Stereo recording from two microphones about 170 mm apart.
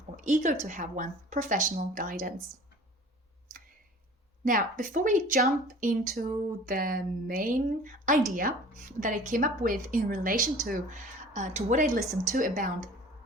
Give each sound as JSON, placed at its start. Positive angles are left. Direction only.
{"t": 0.3, "sound": "speech", "side_deg": -50}
{"t": 4.4, "sound": "speech", "side_deg": -55}